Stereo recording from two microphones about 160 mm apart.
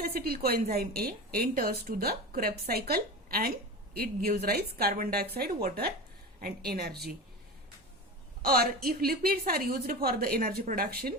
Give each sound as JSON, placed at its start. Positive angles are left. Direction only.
{"t": 0.0, "sound": "a woman's voice", "side_deg": -70}
{"t": 8.4, "sound": "a woman's voice", "side_deg": -70}